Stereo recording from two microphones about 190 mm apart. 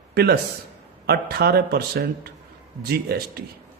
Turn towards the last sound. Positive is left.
turn(degrees=-55)  # may be behind; listen again after turning